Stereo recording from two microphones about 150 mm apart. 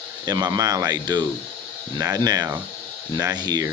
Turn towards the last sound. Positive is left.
turn(degrees=-25)  # may be behind; listen again after turning